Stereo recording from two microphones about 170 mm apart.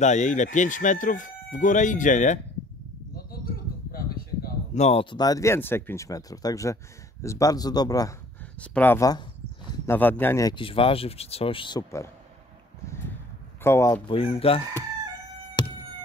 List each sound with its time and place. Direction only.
0.0 s speech: 45° left (ahead or behind)
4.7 s speech: 40° left (ahead or behind)
5.1 s speech: 20° left (ahead or behind)
8.5 s speech: 10° left (ahead or behind)
10.5 s speech: 30° left (ahead or behind)
13.7 s speech: 15° left (ahead or behind)
14.0 s speech: 35° left (ahead or behind)
15.6 s a sound: 25° left (ahead or behind)